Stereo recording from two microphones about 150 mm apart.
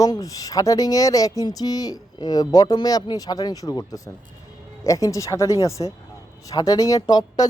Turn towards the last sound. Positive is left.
turn(degrees=25)  # may be behind; listen again after turning